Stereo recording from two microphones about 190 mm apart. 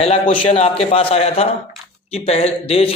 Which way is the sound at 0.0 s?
30° left (ahead or behind).